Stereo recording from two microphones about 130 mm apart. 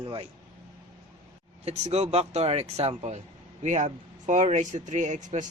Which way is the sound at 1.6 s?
55° right (ahead or behind).